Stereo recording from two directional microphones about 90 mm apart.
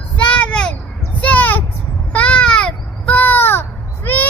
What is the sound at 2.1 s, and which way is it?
Baby cry, 15° left (ahead or behind).